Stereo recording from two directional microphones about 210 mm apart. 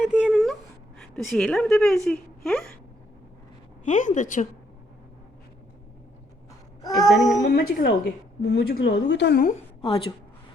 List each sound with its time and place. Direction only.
0.0 s a sound: 5° right (ahead or behind)
1.1 s a woman's voice: 5° left (ahead or behind)
3.8 s a woman's voice: 35° left (ahead or behind)
6.8 s child singing: 15° left (ahead or behind)
7.1 s a woman's voice: centre (ahead or behind)
7.5 s a woman's voice: 45° left (ahead or behind)